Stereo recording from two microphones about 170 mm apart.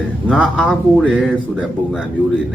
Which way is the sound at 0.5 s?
5° left (ahead or behind).